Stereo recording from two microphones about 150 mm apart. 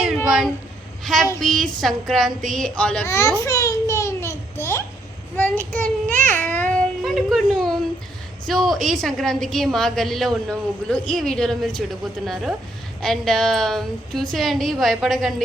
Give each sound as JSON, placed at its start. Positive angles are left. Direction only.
{"t": 0.3, "sound": "meow", "side_deg": 0}
{"t": 1.0, "sound": "a woman's voice", "side_deg": 0}
{"t": 3.1, "sound": "a child's voice", "side_deg": 20}
{"t": 3.4, "sound": "a sound", "side_deg": 20}
{"t": 5.4, "sound": "child singing", "side_deg": 15}
{"t": 8.4, "sound": "a woman's voice", "side_deg": 0}